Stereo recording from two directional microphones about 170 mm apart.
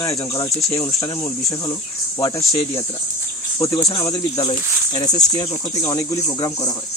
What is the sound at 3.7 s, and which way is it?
Speech, 25° left (ahead or behind).